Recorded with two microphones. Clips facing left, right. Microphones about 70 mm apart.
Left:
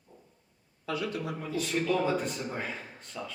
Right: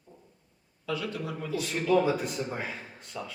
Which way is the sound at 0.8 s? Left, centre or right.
Left.